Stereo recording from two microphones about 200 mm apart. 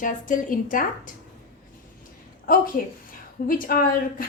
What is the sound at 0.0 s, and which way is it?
A woman's voice, 40° left (ahead or behind).